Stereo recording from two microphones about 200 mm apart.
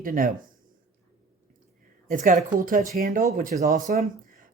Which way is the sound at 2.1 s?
40° right (ahead or behind).